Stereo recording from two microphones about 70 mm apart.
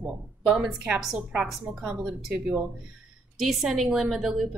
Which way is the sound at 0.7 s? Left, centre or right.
Centre.